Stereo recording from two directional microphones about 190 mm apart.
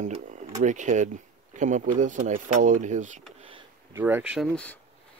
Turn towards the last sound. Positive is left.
turn(degrees=5)  # may be behind; listen again after turning